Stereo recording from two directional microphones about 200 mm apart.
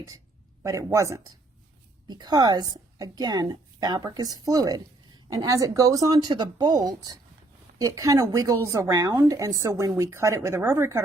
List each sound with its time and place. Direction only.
0.6 s a woman's voice: 15° right (ahead or behind)